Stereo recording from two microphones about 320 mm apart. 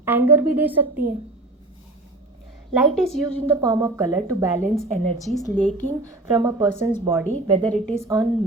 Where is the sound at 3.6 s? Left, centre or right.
Centre.